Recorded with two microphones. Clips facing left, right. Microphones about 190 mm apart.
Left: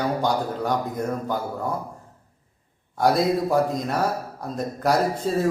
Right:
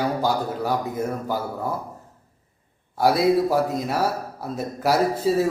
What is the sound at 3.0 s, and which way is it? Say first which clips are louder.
A man's voice: right 2 dB; 5° right (ahead or behind).